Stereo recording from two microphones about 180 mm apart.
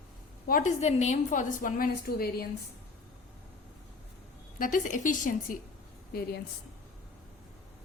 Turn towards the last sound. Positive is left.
turn(degrees=60)  # may be behind; listen again after turning